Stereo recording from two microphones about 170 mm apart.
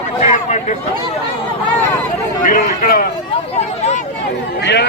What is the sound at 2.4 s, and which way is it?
Speech, 50° left (ahead or behind).